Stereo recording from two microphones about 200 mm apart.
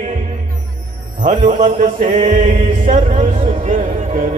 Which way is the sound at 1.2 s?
35° right (ahead or behind).